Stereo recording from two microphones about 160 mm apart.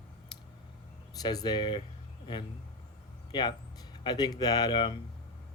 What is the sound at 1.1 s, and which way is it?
Speech, 25° left (ahead or behind).